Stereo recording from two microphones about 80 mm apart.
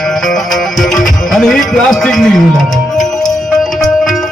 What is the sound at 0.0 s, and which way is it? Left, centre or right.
Music, centre.